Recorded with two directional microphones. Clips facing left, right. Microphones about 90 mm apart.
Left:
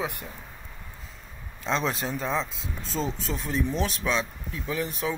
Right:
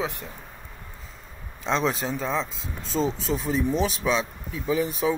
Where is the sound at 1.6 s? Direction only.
Centre (ahead or behind).